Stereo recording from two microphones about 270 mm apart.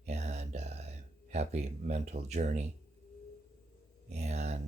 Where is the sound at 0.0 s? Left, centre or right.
Right.